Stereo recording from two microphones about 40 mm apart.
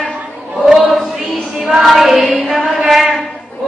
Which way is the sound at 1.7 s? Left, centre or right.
Centre.